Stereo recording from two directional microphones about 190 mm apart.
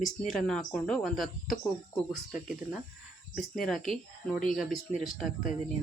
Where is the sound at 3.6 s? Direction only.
Centre (ahead or behind).